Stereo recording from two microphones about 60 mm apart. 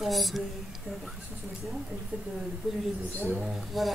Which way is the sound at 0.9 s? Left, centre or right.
Centre.